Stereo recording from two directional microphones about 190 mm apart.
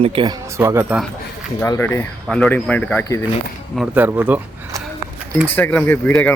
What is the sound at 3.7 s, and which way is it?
Speech, 10° right (ahead or behind).